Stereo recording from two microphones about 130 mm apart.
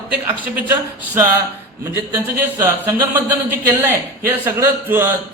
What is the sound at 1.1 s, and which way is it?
Speech, 15° right (ahead or behind).